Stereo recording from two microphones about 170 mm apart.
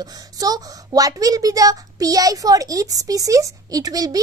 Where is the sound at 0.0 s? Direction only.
20° right (ahead or behind).